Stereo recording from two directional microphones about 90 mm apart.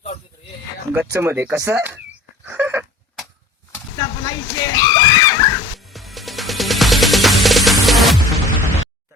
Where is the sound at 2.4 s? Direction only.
20° right (ahead or behind).